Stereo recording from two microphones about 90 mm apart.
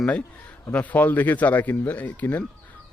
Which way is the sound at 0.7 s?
20° left (ahead or behind).